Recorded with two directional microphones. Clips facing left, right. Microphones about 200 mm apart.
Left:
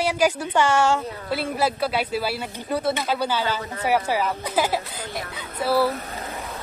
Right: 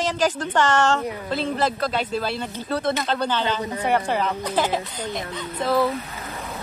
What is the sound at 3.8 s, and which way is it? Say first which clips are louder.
Speech: left 1 dB; 5° left (ahead or behind).